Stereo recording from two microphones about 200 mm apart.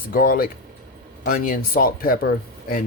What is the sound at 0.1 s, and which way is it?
Speech, 45° left (ahead or behind).